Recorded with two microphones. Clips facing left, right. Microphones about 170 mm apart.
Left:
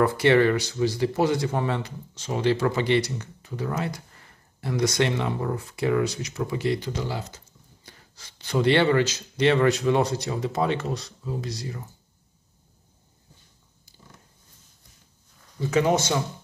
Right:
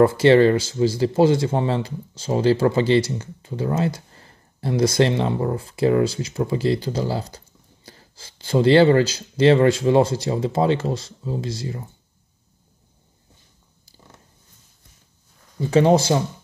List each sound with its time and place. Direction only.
0.0 s speech: 25° right (ahead or behind)
15.7 s speech: 30° right (ahead or behind)